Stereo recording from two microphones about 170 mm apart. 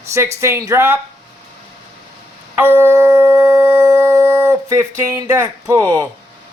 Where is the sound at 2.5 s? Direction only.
10° right (ahead or behind).